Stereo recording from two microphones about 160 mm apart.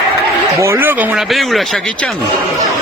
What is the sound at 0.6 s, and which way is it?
Speech, 15° right (ahead or behind).